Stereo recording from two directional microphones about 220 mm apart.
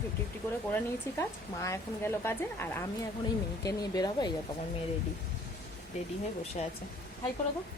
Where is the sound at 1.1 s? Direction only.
15° left (ahead or behind).